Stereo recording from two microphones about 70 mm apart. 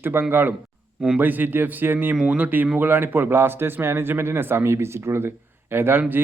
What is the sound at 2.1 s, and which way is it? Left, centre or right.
A man's voice, centre.